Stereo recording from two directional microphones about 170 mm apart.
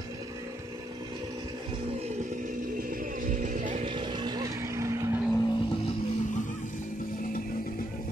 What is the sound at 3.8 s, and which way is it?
Vehicle, 25° right (ahead or behind).